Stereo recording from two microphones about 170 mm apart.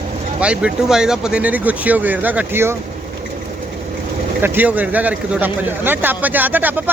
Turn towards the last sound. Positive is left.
turn(degrees=-10)  # may be behind; listen again after turning